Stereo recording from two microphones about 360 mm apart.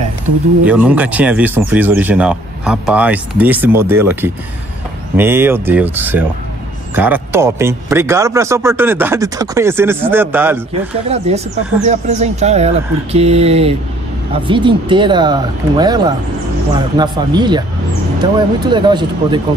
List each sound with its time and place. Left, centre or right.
0.7 s speech: centre
11.1 s speech: centre